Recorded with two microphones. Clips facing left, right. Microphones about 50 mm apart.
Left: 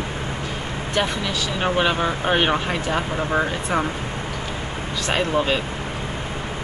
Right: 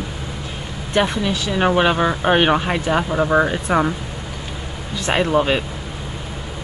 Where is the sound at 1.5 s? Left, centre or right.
Centre.